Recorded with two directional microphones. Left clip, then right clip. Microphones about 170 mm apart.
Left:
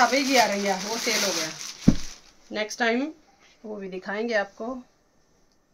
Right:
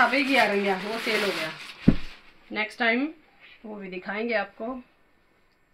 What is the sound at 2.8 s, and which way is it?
Speech, 35° left (ahead or behind).